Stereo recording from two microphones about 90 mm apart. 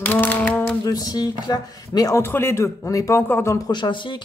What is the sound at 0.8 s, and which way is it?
Speech, 45° left (ahead or behind).